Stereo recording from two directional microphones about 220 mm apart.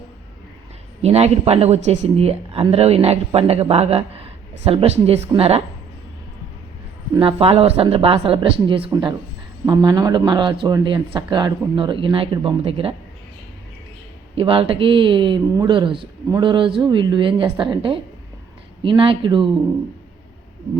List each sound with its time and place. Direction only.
1.0 s speech: 30° right (ahead or behind)
7.1 s speech: 25° right (ahead or behind)
14.3 s speech: 25° right (ahead or behind)